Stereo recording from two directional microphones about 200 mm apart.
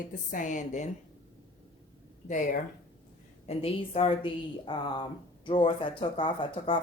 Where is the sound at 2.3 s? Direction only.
40° left (ahead or behind).